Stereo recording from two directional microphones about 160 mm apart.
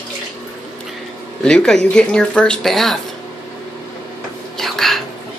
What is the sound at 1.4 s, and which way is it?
Speech, 5° left (ahead or behind).